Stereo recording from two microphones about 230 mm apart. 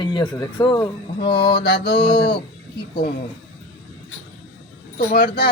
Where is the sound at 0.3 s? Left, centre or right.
Centre.